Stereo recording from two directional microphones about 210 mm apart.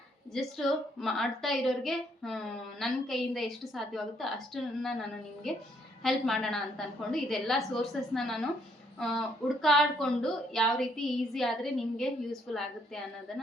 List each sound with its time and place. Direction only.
0.3 s a woman's voice: centre (ahead or behind)